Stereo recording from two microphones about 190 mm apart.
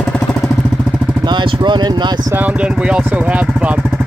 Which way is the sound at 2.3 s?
10° right (ahead or behind).